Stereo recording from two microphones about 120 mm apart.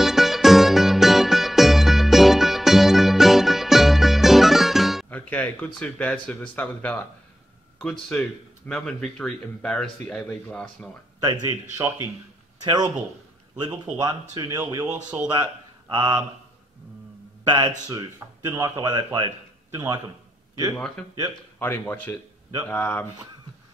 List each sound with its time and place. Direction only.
0.0 s music: centre (ahead or behind)
5.1 s speech: 15° left (ahead or behind)
11.7 s speech: 20° right (ahead or behind)
12.6 s speech: 35° right (ahead or behind)
17.5 s speech: 35° right (ahead or behind)
20.7 s speech: 5° left (ahead or behind)
21.5 s speech: 15° left (ahead or behind)